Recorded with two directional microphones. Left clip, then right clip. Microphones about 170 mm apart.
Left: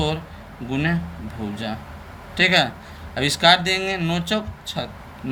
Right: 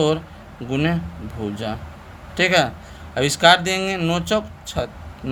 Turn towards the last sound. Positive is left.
turn(degrees=-50)  # may be behind; listen again after turning